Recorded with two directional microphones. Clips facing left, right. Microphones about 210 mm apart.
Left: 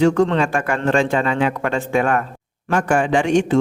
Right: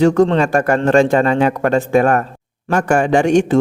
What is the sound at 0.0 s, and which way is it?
A man's voice, 40° right (ahead or behind).